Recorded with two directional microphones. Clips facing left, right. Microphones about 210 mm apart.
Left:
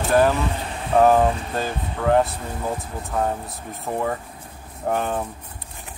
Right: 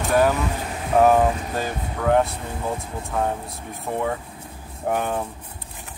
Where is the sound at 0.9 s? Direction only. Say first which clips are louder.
Left 1 dB; 5° right (ahead or behind).